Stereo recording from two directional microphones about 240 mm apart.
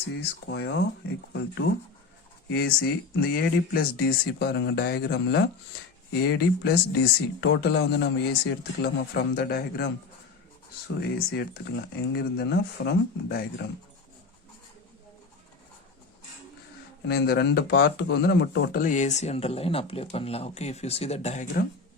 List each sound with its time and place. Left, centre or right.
0.1 s a man's voice: left
11.0 s speech: left
17.1 s speech: left